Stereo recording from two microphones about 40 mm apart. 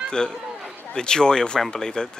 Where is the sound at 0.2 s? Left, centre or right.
Centre.